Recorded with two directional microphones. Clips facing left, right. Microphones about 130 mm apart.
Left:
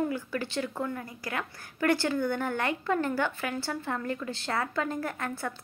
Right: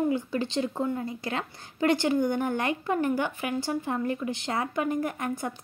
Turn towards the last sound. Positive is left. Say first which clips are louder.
# right 3 dB
turn(degrees=-15)  # may be behind; listen again after turning